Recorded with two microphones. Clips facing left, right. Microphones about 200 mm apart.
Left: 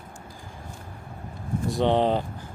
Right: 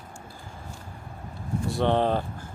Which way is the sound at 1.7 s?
15° left (ahead or behind).